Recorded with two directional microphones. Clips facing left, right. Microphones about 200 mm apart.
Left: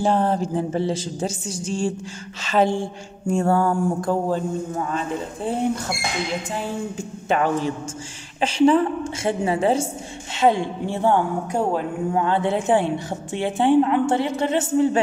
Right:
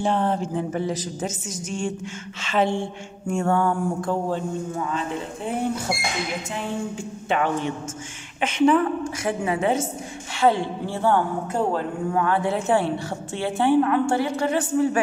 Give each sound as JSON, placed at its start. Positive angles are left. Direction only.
{"t": 0.0, "sound": "speech", "side_deg": 40}
{"t": 7.2, "sound": "speech", "side_deg": 40}
{"t": 10.3, "sound": "a man's voice", "side_deg": 20}